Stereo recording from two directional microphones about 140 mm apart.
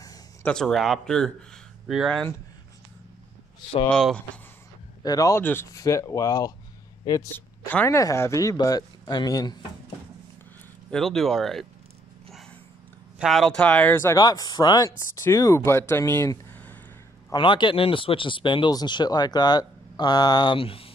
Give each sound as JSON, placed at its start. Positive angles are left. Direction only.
{"t": 0.0, "sound": "a sound", "side_deg": 25}
{"t": 0.5, "sound": "speech", "side_deg": 5}
{"t": 3.9, "sound": "speech", "side_deg": 5}
{"t": 5.0, "sound": "speech", "side_deg": 25}
{"t": 10.9, "sound": "speech", "side_deg": 5}
{"t": 13.2, "sound": "speech", "side_deg": 0}
{"t": 17.3, "sound": "speech", "side_deg": 35}